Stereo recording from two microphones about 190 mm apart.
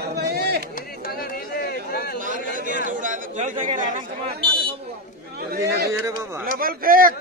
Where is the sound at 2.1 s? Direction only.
45° right (ahead or behind).